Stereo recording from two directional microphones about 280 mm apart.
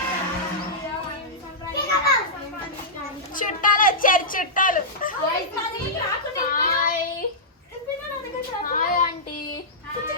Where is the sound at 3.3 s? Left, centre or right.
Left.